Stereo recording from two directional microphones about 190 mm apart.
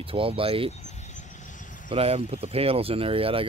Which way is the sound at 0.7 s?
35° left (ahead or behind).